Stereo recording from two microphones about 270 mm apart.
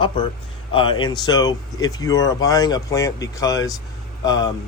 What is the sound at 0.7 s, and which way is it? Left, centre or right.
Speech, centre.